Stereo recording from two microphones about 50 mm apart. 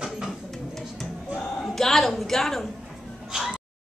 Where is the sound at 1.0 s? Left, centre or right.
Centre.